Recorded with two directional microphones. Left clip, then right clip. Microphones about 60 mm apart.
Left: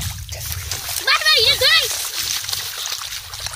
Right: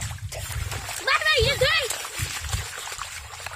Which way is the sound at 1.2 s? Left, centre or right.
Centre.